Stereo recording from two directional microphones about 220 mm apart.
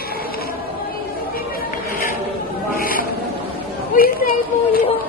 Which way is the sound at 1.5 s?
40° left (ahead or behind).